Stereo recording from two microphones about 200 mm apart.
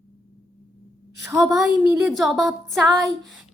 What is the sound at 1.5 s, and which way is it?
Speech, 5° right (ahead or behind).